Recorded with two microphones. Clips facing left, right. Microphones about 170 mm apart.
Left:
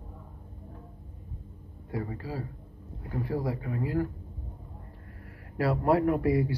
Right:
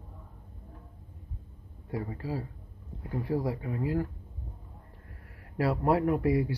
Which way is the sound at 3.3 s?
15° right (ahead or behind).